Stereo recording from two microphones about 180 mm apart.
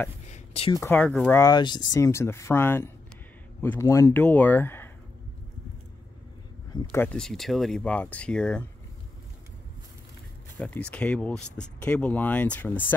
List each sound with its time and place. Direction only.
0.3 s a sound: 35° left (ahead or behind)
0.7 s speech: 10° left (ahead or behind)
1.4 s speech: 25° left (ahead or behind)
6.7 s speech: 15° left (ahead or behind)
10.6 s speech: 5° left (ahead or behind)